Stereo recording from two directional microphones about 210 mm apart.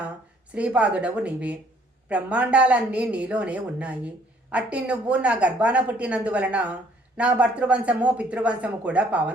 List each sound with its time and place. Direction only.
0.5 s a woman's voice: 5° right (ahead or behind)